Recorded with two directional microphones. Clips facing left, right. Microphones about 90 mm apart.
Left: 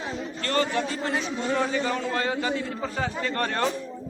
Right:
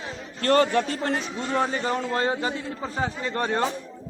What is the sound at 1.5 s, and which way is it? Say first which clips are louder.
A man's voice: right 3 dB; 35° right (ahead or behind).